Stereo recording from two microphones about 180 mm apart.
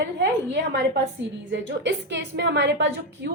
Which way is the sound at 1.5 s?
80° right.